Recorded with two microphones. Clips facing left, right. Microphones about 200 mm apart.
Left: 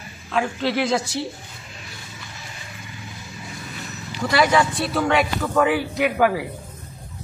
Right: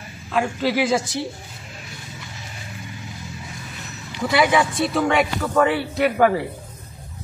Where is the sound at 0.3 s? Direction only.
5° right (ahead or behind).